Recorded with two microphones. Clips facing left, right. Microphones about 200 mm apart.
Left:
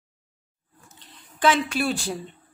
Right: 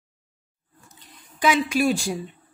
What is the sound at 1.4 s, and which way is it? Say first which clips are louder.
Speech: right 2 dB; 10° right (ahead or behind).